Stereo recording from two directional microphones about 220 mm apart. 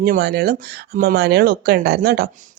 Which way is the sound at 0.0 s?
45° right (ahead or behind).